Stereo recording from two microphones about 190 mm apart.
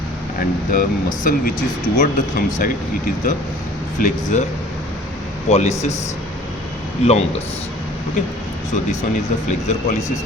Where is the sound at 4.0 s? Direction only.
40° left (ahead or behind).